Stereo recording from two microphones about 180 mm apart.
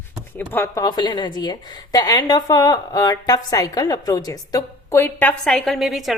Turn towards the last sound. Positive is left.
turn(degrees=0)  # may be behind; listen again after turning